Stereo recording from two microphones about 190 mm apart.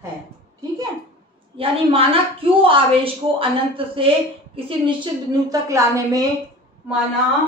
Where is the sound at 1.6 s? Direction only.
30° right (ahead or behind).